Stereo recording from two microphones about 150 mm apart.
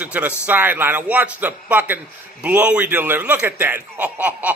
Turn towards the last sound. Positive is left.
turn(degrees=-10)  # may be behind; listen again after turning